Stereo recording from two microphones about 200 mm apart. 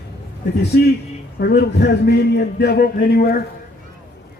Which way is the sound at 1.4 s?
55° left (ahead or behind).